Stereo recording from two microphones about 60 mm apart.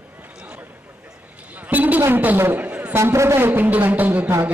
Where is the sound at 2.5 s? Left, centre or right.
Right.